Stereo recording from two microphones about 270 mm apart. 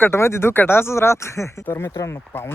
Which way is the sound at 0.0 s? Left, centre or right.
Centre.